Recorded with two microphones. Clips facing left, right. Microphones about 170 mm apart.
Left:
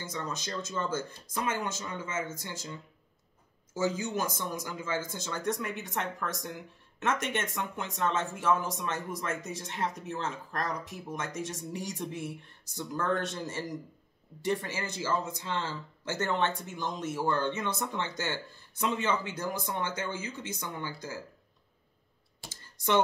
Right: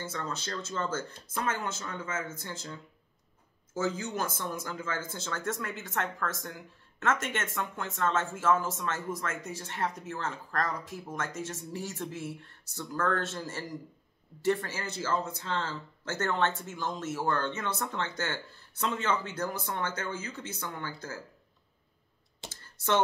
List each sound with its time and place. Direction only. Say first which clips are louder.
0.1 s speech: even; 15° left (ahead or behind)
3.7 s speech: left 1 dB; 10° left (ahead or behind)
22.5 s computer keyboard: even; 15° left (ahead or behind)